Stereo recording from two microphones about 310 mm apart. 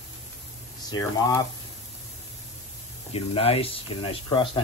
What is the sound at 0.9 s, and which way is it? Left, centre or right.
Speech, centre.